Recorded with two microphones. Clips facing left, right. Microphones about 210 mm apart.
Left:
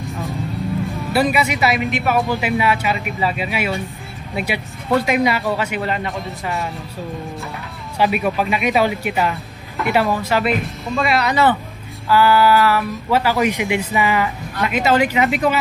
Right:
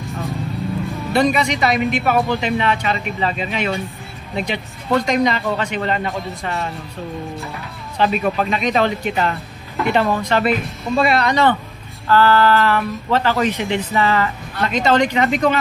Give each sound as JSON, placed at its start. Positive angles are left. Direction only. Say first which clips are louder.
{"t": 0.0, "sound": "music", "louder": "even", "side_deg": 0}
{"t": 1.1, "sound": "speech", "louder": "right 1 dB", "side_deg": 5}
{"t": 8.0, "sound": "speech", "louder": "even", "side_deg": 10}